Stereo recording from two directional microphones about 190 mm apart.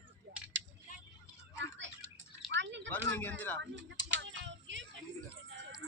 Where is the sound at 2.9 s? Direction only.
10° left (ahead or behind).